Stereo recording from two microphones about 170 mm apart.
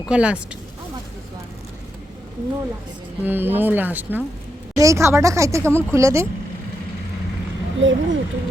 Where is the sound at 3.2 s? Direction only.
10° right (ahead or behind).